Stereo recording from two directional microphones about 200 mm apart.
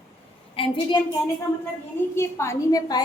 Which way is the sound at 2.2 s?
15° left (ahead or behind).